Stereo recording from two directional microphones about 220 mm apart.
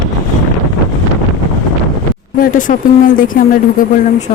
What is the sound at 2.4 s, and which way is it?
Speech, 35° left (ahead or behind).